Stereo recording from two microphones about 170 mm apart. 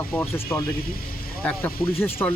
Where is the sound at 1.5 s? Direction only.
10° left (ahead or behind).